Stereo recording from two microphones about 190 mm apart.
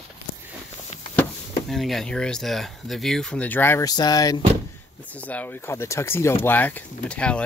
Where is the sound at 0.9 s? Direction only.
35° left (ahead or behind).